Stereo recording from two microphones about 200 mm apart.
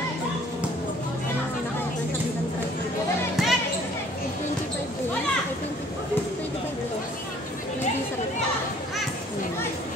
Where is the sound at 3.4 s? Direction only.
Centre (ahead or behind).